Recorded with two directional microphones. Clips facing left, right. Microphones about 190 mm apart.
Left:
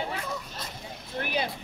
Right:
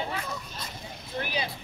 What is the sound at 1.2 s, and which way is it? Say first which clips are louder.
Speech: left 2 dB; 55° left (ahead or behind).